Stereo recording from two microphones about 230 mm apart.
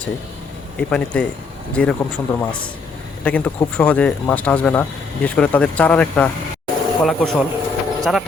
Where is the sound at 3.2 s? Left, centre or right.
Centre.